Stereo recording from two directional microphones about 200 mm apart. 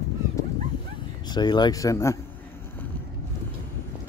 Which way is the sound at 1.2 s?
20° left (ahead or behind).